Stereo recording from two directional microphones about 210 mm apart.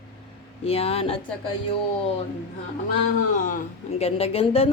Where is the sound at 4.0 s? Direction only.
30° left (ahead or behind).